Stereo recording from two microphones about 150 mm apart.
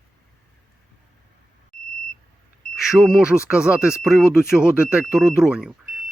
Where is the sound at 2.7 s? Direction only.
Centre (ahead or behind).